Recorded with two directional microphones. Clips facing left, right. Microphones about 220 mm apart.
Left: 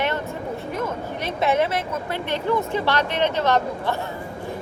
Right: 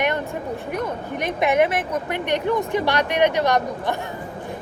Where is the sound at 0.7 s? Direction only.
15° right (ahead or behind).